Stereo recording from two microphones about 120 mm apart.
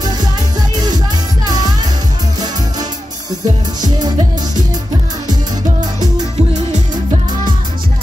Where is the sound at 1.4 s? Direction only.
35° right (ahead or behind).